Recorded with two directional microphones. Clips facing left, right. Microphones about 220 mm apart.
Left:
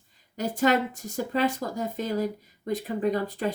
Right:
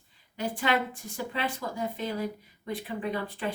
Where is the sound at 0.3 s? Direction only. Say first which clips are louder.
Left 5 dB; 40° left (ahead or behind).